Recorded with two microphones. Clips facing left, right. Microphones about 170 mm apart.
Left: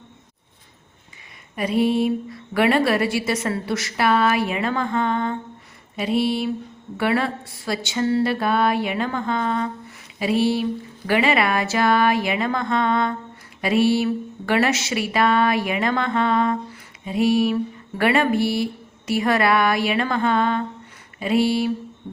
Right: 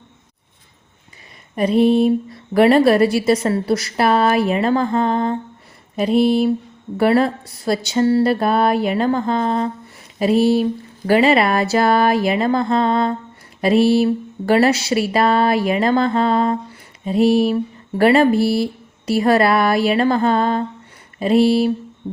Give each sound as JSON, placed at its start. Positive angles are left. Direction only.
{"t": 1.8, "sound": "a woman's voice", "side_deg": -35}
{"t": 6.0, "sound": "a sound", "side_deg": -40}
{"t": 6.9, "sound": "a woman's voice", "side_deg": -40}